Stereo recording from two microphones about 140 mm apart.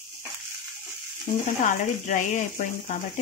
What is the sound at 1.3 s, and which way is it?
Frying, 55° left (ahead or behind).